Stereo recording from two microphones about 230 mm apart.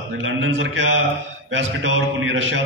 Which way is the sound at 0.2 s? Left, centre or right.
Right.